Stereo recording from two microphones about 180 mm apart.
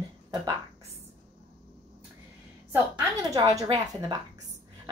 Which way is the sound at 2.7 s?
20° right (ahead or behind).